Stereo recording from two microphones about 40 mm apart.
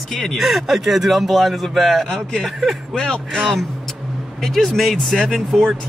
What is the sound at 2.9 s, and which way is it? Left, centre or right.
Speech, centre.